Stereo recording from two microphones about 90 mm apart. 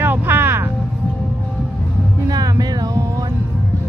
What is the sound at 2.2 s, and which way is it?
Music, 45° right (ahead or behind).